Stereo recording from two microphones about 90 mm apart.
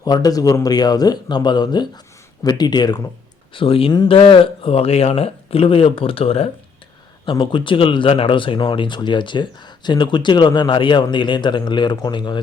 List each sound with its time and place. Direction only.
0.0 s speech: 45° left (ahead or behind)
3.5 s speech: 80° left
7.3 s speech: 65° left (ahead or behind)